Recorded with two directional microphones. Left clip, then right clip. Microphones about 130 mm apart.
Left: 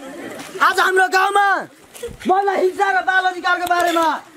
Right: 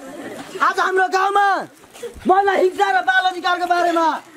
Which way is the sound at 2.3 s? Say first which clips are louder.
Right 1 dB; 30° right (ahead or behind).